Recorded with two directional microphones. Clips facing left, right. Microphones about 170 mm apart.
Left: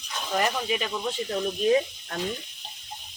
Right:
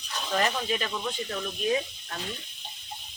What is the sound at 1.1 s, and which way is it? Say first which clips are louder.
Speech: left 4 dB; 25° left (ahead or behind).